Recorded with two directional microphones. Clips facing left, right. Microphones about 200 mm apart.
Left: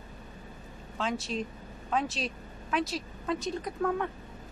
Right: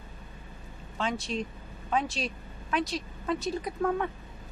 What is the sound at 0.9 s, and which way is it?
A woman's voice, centre (ahead or behind).